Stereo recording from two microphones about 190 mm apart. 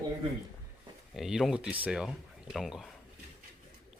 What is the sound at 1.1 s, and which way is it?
Speech, centre (ahead or behind).